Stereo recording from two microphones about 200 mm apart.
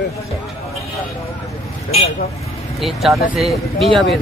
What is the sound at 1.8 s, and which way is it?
Speech, 30° left (ahead or behind).